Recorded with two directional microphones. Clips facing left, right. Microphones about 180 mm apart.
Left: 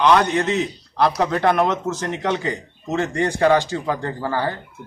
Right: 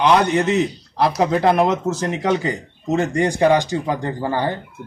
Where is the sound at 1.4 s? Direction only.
25° right (ahead or behind).